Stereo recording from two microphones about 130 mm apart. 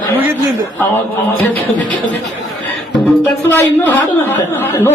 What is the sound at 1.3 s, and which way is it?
Speech, 15° left (ahead or behind).